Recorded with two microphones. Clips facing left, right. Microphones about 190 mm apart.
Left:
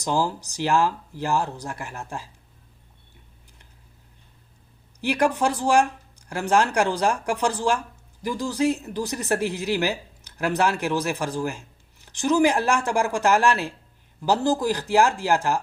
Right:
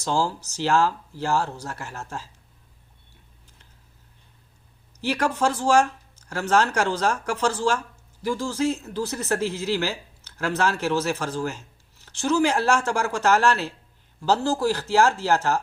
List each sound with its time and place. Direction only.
0.0 s speech: 15° left (ahead or behind)
4.9 s speech: 15° left (ahead or behind)